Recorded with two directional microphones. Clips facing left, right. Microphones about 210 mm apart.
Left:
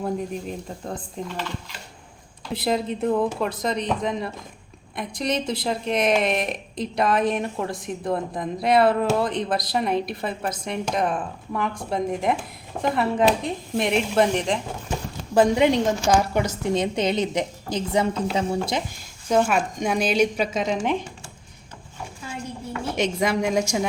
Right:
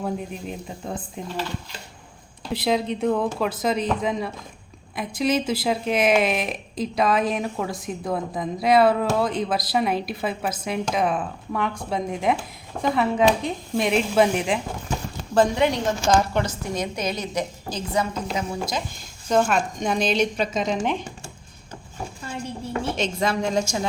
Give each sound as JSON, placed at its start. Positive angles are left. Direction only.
{"t": 0.0, "sound": "speech", "side_deg": -5}
{"t": 2.5, "sound": "speech", "side_deg": 0}
{"t": 15.4, "sound": "speech", "side_deg": 20}
{"t": 16.7, "sound": "a woman's voice", "side_deg": 30}
{"t": 19.3, "sound": "speech", "side_deg": 10}
{"t": 23.0, "sound": "speech", "side_deg": 15}